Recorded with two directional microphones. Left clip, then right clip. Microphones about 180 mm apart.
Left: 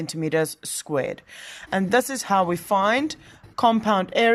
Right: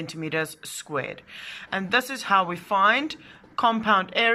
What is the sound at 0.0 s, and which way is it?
Speech, 30° left (ahead or behind).